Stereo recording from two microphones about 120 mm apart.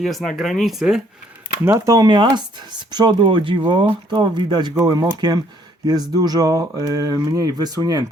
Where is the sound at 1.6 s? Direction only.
25° right (ahead or behind).